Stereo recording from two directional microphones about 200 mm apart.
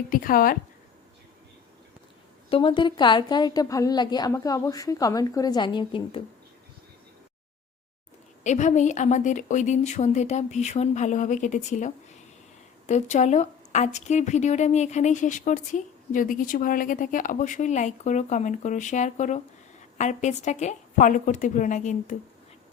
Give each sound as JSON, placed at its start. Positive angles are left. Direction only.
{"t": 0.1, "sound": "speech", "side_deg": 45}
{"t": 2.5, "sound": "a woman's voice", "side_deg": 25}
{"t": 8.4, "sound": "speech", "side_deg": 35}
{"t": 12.9, "sound": "speech", "side_deg": 35}